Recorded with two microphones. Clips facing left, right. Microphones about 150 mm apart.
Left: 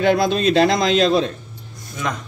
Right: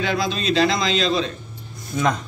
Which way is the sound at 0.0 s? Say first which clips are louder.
Left 7 dB; 55° left (ahead or behind).